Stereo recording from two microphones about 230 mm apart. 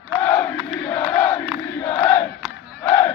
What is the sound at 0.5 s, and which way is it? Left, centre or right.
Crowd, centre.